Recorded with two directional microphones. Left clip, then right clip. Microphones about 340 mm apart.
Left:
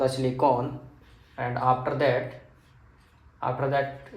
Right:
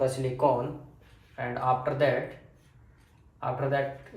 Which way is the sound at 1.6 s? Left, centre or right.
Left.